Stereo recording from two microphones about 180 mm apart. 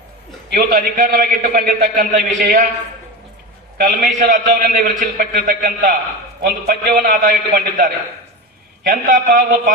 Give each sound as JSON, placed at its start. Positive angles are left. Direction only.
{"t": 0.5, "sound": "a man's voice", "side_deg": -50}
{"t": 3.8, "sound": "a man's voice", "side_deg": -45}
{"t": 8.9, "sound": "a man's voice", "side_deg": -50}